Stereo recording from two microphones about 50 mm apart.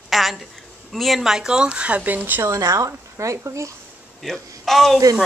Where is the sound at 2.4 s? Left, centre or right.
Right.